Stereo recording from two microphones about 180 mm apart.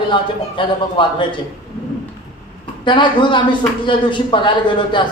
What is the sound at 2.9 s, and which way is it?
A man's voice, 25° left (ahead or behind).